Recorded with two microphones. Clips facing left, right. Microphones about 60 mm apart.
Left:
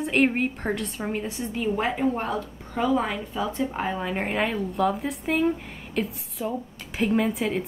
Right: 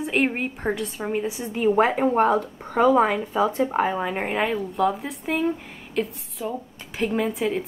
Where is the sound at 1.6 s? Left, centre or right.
Right.